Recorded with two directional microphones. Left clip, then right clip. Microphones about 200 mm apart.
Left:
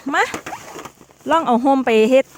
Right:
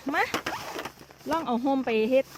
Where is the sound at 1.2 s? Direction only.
50° left (ahead or behind).